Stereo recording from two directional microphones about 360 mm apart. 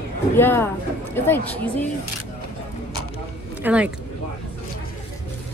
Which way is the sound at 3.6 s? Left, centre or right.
Centre.